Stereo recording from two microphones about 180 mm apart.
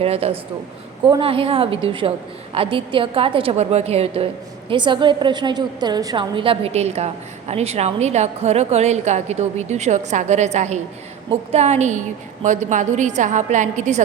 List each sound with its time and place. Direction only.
0.0 s a woman's voice: 35° right (ahead or behind)